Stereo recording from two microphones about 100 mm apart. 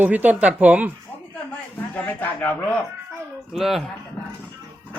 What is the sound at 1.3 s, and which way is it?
A man's voice, 15° left (ahead or behind).